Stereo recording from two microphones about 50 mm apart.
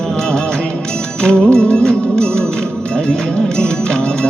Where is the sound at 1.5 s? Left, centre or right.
Centre.